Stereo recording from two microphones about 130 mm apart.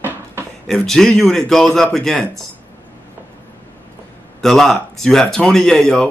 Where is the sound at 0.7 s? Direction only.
5° left (ahead or behind).